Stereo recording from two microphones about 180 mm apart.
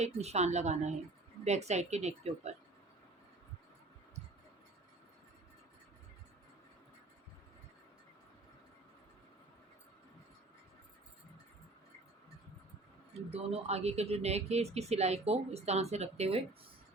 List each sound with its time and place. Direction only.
0.0 s speech: 35° right (ahead or behind)
13.3 s speech: 35° right (ahead or behind)